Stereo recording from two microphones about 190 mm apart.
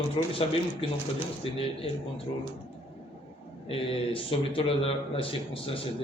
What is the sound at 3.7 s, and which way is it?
Speech, 30° left (ahead or behind).